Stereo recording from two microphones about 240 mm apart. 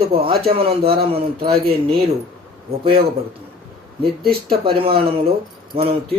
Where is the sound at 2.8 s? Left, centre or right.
Right.